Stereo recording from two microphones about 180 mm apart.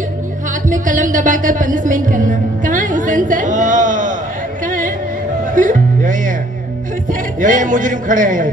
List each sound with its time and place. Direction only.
0.7 s speech: 45° right (ahead or behind)
4.6 s music: 45° right (ahead or behind)
7.1 s a man's voice: 45° right (ahead or behind)